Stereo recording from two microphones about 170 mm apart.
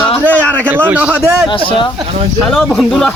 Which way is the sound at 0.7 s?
10° right (ahead or behind).